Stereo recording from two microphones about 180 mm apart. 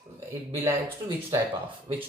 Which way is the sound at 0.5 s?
15° right (ahead or behind).